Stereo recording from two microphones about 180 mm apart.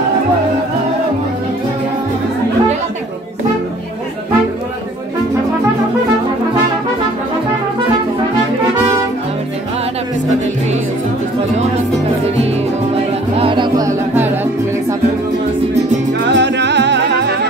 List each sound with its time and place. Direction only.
13.4 s music: 25° right (ahead or behind); by 15.0 s 10° right (ahead or behind)
16.3 s music: 75° right (ahead or behind)